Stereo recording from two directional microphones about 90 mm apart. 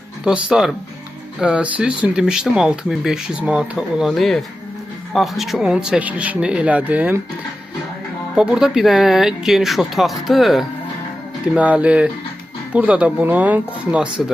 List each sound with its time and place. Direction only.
0.3 s speech: 10° right (ahead or behind)
8.4 s speech: 5° right (ahead or behind)
11.4 s speech: 15° right (ahead or behind)